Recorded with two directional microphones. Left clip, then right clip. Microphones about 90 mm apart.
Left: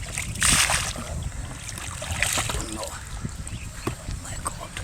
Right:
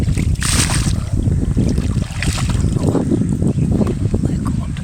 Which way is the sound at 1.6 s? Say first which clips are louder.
Right 10 dB; 5° left (ahead or behind).